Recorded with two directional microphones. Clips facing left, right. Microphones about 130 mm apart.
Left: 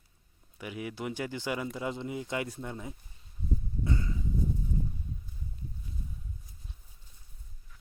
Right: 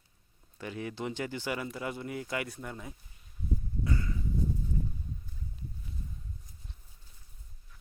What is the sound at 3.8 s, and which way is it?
Livestock, 20° left (ahead or behind).